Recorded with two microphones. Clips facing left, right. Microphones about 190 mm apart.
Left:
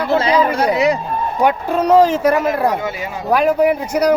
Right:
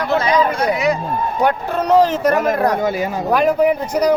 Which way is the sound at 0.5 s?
30° left (ahead or behind).